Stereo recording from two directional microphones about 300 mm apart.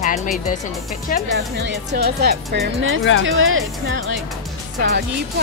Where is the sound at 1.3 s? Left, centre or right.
Right.